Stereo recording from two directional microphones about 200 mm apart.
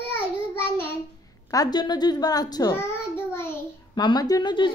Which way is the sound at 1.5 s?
20° left (ahead or behind).